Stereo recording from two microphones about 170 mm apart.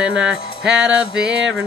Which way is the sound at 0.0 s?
5° right (ahead or behind).